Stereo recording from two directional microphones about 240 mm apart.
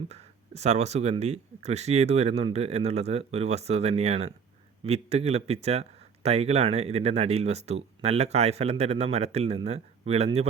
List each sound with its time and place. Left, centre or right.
0.1 s speech: right